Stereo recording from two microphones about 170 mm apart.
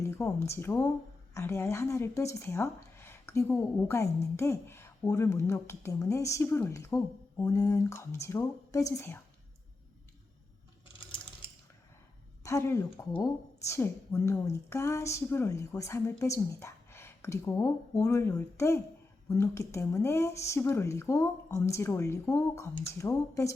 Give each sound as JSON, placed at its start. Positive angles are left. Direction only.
{"t": 0.0, "sound": "a woman's voice", "side_deg": 15}
{"t": 12.4, "sound": "a woman's voice", "side_deg": 15}